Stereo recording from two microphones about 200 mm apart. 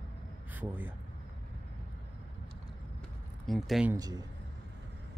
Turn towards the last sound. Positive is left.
turn(degrees=-20)  # may be behind; listen again after turning